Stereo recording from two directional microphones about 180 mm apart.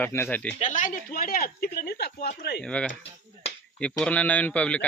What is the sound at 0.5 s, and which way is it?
Speech, 45° left (ahead or behind).